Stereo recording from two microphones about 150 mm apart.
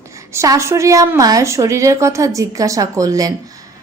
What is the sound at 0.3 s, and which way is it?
A woman's voice, 20° right (ahead or behind).